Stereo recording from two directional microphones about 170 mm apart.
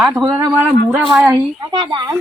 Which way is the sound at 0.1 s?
20° right (ahead or behind).